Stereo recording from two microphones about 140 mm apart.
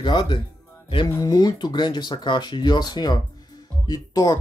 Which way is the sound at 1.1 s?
25° left (ahead or behind).